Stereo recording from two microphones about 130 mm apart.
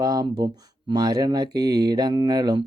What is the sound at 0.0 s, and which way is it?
Speech, 35° right (ahead or behind).